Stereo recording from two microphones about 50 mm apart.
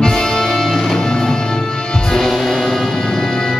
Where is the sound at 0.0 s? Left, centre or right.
Centre.